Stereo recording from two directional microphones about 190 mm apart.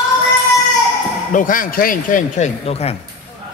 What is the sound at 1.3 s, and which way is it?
Speech, 45° left (ahead or behind).